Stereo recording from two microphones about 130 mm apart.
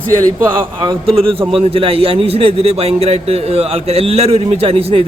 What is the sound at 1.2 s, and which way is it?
A man's voice, 45° right (ahead or behind).